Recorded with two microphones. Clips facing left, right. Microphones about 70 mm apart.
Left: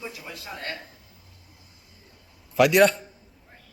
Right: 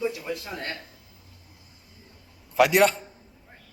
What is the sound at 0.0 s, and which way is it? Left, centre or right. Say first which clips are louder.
Speech: right 9 dB; centre.